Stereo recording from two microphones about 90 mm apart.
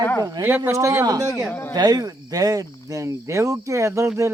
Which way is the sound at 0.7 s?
35° right (ahead or behind).